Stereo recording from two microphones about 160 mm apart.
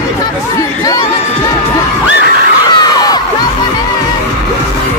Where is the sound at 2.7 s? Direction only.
25° left (ahead or behind).